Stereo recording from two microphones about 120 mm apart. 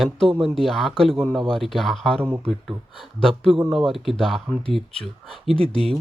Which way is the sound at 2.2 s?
15° right (ahead or behind).